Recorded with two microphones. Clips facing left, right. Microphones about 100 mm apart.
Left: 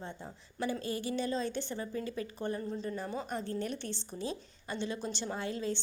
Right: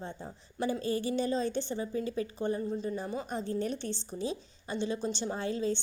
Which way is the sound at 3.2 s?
25° right (ahead or behind).